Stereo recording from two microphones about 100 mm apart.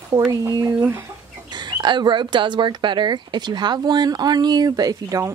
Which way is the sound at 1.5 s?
45° right (ahead or behind).